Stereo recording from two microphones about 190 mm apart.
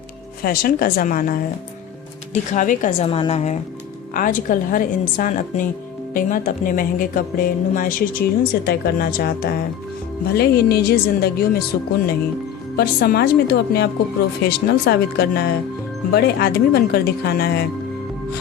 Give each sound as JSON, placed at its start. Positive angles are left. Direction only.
{"t": 0.4, "sound": "a woman's voice", "side_deg": 50}
{"t": 3.1, "sound": "a woman's voice", "side_deg": 30}
{"t": 12.7, "sound": "speech", "side_deg": 55}